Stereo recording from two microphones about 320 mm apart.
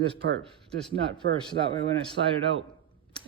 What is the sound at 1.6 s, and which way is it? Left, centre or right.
Speech, centre.